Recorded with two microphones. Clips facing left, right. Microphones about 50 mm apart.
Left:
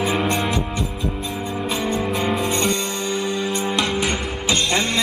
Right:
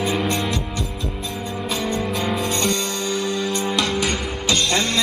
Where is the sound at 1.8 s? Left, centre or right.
Centre.